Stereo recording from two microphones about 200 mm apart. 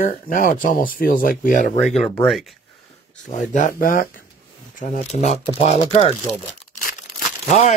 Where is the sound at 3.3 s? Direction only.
40° left (ahead or behind).